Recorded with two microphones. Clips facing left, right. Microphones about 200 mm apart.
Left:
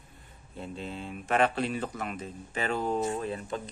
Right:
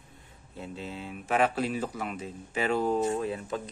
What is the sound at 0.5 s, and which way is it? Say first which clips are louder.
Speech: even; 5° right (ahead or behind).